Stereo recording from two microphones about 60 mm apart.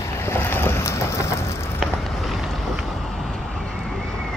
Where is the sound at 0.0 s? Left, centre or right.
Left.